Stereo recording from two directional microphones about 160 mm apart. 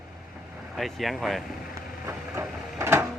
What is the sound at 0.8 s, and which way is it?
Speech, centre (ahead or behind).